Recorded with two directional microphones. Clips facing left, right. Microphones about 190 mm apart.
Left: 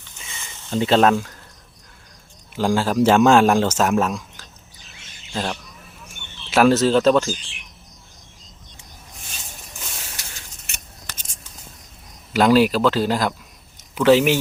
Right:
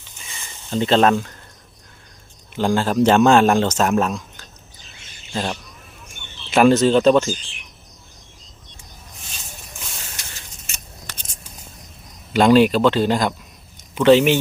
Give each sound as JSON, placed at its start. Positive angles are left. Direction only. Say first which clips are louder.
{"t": 0.7, "sound": "a man's voice", "louder": "even", "side_deg": 5}
{"t": 2.6, "sound": "a man's voice", "louder": "right 1 dB", "side_deg": 5}
{"t": 10.7, "sound": "keys jangling", "louder": "even", "side_deg": 65}
{"t": 12.3, "sound": "a man's voice", "louder": "right 2 dB", "side_deg": 5}